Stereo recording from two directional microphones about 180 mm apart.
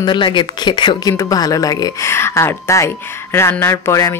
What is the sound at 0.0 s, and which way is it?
A woman's voice, 25° left (ahead or behind).